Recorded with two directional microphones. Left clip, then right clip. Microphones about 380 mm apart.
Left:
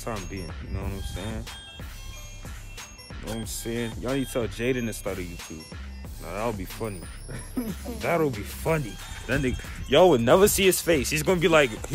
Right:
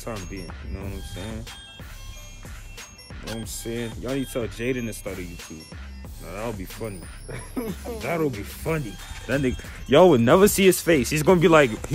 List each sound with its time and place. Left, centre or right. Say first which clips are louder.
0.0 s speech: even; centre
3.3 s speech: even; centre
7.2 s music: right 2 dB; centre
7.6 s speech: left 1 dB; centre
9.8 s speech: right 2 dB; centre